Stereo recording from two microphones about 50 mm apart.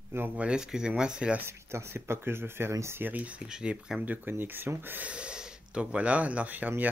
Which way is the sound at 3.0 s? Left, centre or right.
Right.